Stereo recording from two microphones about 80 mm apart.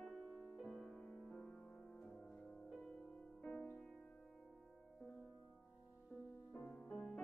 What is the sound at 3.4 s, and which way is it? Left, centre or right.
Music, centre.